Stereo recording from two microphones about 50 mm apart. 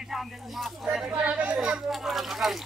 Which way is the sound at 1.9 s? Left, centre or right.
Centre.